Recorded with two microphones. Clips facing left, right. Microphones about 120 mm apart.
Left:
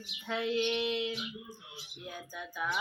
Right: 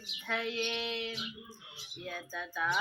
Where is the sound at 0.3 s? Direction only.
20° left (ahead or behind).